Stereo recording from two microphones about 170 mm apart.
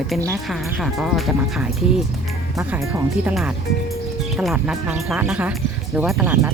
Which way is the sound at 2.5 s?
15° right (ahead or behind).